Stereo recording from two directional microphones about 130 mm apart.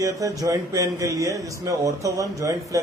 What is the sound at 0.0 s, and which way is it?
Speech, 25° right (ahead or behind).